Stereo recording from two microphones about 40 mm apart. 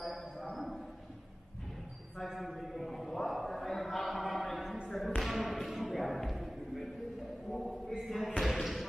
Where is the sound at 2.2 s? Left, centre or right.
Centre.